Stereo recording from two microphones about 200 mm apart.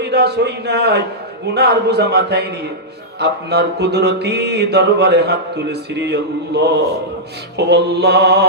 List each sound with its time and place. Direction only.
0.0 s mantra: 55° right (ahead or behind)